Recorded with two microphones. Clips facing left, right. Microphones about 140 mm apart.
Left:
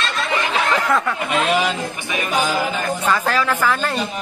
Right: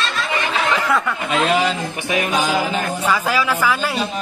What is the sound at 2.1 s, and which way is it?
Music, 85° right.